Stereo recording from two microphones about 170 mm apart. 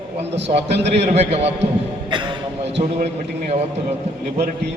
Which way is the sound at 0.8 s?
40° right (ahead or behind).